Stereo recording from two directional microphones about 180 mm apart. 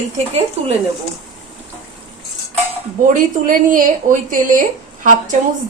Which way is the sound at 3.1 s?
50° right (ahead or behind).